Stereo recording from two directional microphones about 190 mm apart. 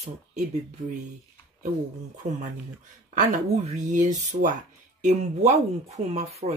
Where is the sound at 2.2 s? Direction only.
40° right (ahead or behind).